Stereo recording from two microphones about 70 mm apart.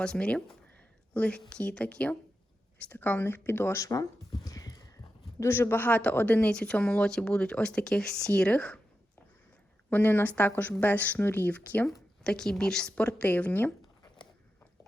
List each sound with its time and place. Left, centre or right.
0.0 s speech: centre; by 3.8 s left
3.8 s speech: left
4.4 s a sound: left
5.4 s speech: left; by 8.8 s centre
9.9 s speech: left
12.2 s speech: centre; by 13.7 s left